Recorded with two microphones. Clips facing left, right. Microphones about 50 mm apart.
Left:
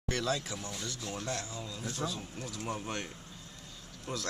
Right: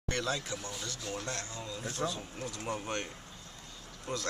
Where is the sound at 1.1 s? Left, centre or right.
Centre.